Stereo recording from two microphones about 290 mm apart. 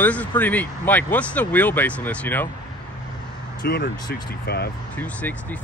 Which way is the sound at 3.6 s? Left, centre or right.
Left.